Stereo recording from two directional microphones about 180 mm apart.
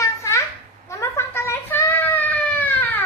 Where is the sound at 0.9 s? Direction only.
15° left (ahead or behind).